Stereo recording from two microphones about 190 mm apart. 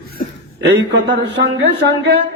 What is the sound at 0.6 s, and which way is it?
Speech, 65° right (ahead or behind).